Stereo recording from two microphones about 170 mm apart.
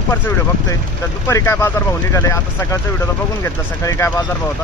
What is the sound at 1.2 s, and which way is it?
Speech, 15° left (ahead or behind).